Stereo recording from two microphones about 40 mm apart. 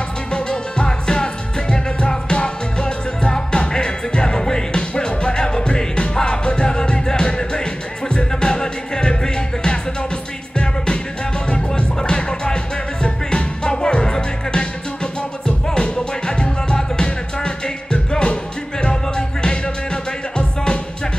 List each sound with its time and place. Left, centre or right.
0.3 s music: left
11.5 s music: left